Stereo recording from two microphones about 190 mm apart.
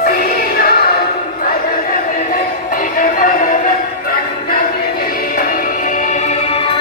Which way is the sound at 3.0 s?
45° left (ahead or behind).